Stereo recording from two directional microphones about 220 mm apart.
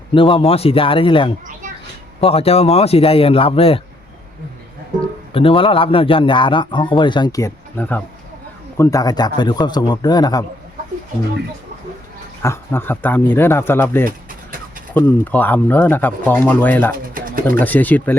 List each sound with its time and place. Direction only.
0.1 s a man's voice: 25° left (ahead or behind)
5.3 s a man's voice: 25° left (ahead or behind)
12.4 s speech: 10° left (ahead or behind)
17.2 s pigeon: 40° right (ahead or behind)
17.5 s speech: 10° left (ahead or behind)